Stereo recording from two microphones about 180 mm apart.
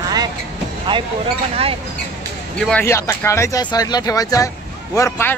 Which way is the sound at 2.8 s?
15° left (ahead or behind).